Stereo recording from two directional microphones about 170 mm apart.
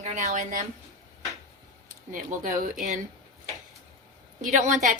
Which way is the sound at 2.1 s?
50° right (ahead or behind).